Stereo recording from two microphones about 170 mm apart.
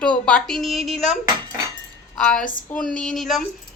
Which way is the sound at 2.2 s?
5° left (ahead or behind).